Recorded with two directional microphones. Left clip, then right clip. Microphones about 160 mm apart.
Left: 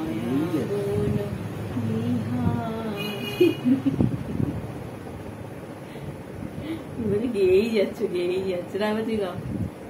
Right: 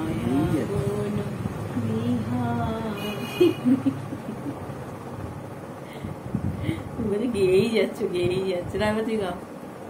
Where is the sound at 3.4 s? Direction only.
15° right (ahead or behind).